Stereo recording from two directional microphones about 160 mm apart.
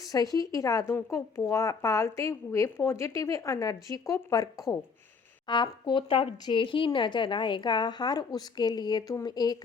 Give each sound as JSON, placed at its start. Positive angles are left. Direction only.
{"t": 0.1, "sound": "speech", "side_deg": 25}